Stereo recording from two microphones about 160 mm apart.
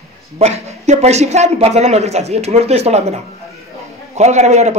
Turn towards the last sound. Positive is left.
turn(degrees=-45)  # may be behind; listen again after turning